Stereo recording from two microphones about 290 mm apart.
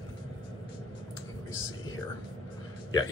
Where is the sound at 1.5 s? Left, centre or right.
Left.